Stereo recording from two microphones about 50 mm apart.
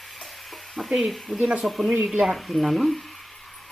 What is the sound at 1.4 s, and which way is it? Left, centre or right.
Speech, centre.